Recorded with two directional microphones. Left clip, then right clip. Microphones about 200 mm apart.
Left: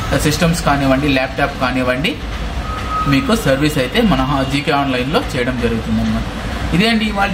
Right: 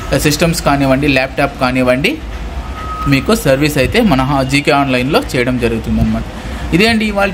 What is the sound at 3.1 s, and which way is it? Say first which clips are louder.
Speech: right 5 dB; 50° right (ahead or behind).